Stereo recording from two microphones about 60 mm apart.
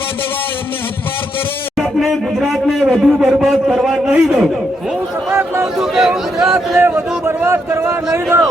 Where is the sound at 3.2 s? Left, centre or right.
Centre.